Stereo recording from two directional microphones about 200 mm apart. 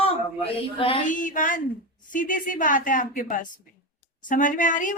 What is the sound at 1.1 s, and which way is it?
A woman's voice, 40° left (ahead or behind).